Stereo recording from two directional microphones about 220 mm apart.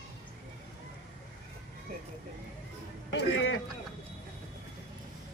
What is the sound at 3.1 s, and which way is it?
Speech, 55° left (ahead or behind).